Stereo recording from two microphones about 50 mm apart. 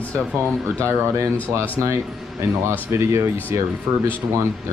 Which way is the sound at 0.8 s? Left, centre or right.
Right.